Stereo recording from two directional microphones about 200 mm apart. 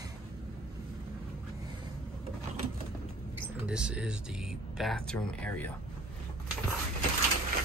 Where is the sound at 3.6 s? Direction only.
5° right (ahead or behind).